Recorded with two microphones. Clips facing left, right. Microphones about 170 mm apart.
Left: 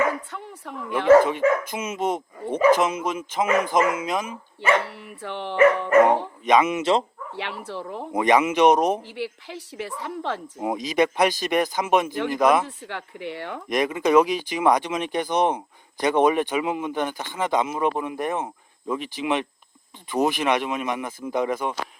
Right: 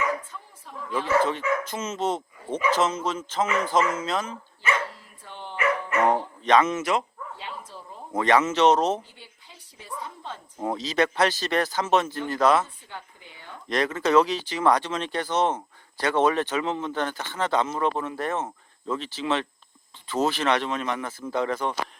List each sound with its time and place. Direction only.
0.0 s speech: 70° left (ahead or behind)
1.6 s speech: 10° left (ahead or behind)
3.4 s a sound: 55° left (ahead or behind)
3.9 s speech: 15° left (ahead or behind)
4.7 s speech: 70° left (ahead or behind)
6.4 s speech: 10° left (ahead or behind)
7.3 s a woman's voice: 75° left (ahead or behind)
8.1 s speech: 15° left (ahead or behind)
9.0 s a woman's voice: 75° left (ahead or behind)
10.6 s speech: 15° left (ahead or behind)
12.6 s a woman's voice: 75° left (ahead or behind)
13.7 s speech: 15° left (ahead or behind)